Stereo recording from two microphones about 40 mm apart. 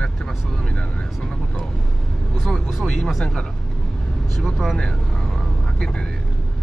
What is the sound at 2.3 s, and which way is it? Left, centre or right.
Speech, centre.